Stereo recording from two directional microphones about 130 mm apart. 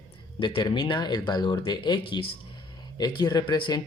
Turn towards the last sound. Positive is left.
turn(degrees=35)  # may be behind; listen again after turning